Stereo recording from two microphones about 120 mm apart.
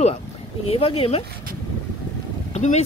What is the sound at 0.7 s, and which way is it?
Speech, 55° left (ahead or behind).